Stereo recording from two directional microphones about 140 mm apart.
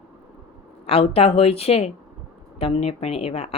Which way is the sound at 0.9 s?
45° left (ahead or behind).